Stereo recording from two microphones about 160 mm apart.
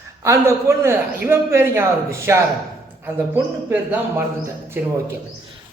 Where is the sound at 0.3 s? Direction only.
15° right (ahead or behind).